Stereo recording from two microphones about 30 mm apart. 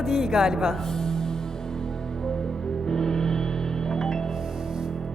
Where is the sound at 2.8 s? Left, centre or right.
Left.